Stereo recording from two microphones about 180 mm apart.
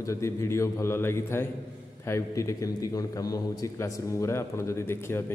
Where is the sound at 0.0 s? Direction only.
15° left (ahead or behind).